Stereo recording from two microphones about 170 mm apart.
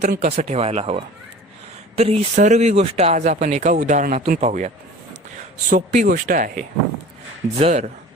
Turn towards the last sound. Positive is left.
turn(degrees=-40)  # may be behind; listen again after turning